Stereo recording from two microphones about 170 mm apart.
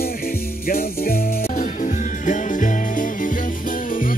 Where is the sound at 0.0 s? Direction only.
60° left (ahead or behind).